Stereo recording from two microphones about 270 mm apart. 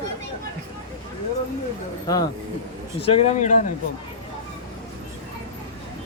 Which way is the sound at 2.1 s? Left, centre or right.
Centre.